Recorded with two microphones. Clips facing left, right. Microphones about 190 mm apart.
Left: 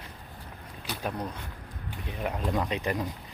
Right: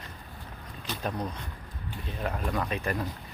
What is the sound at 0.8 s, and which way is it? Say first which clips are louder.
Speech: right 1 dB; 10° left (ahead or behind).